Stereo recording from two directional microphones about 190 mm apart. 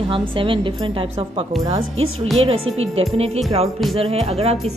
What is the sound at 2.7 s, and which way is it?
Speech, 90° right.